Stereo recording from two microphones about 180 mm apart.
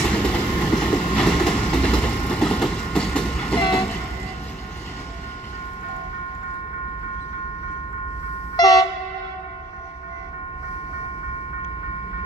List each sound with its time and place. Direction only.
0.0 s train: 5° left (ahead or behind)
8.5 s train: 20° left (ahead or behind)